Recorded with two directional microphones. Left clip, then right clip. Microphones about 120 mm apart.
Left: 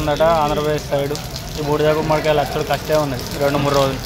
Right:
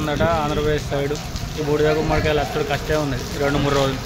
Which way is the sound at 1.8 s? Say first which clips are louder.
Left 5 dB; 5° right (ahead or behind).